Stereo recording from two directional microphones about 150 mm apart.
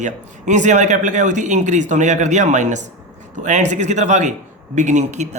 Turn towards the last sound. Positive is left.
turn(degrees=-50)  # may be behind; listen again after turning